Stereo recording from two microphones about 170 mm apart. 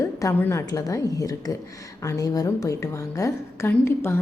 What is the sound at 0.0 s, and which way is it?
A woman's voice, 15° left (ahead or behind).